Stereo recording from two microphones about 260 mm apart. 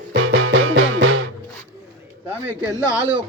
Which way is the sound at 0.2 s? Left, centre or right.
Right.